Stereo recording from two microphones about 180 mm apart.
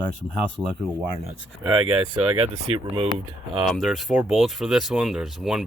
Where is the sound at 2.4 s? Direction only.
30° right (ahead or behind).